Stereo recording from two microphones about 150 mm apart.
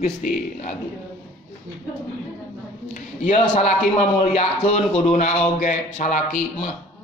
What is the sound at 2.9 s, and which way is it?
A man's voice, 55° left (ahead or behind).